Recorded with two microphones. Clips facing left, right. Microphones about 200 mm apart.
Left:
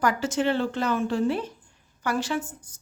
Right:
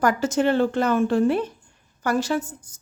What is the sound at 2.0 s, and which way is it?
Speech, 40° right (ahead or behind).